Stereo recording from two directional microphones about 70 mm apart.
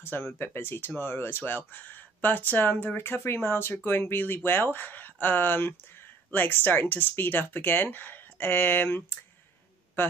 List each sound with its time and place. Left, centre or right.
0.0 s a man's voice: left